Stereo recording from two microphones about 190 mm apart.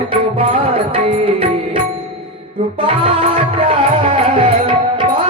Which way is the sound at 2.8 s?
30° right (ahead or behind).